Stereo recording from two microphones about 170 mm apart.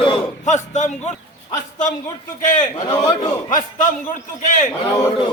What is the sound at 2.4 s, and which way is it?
A man's voice, 45° left (ahead or behind).